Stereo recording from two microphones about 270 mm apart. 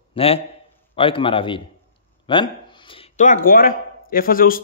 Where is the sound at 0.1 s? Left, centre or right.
Left.